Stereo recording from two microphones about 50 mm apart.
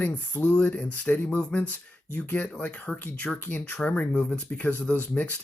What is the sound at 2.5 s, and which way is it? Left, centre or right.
Speech, left.